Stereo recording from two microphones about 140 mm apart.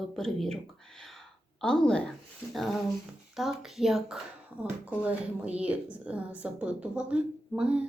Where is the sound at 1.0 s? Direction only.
Centre (ahead or behind).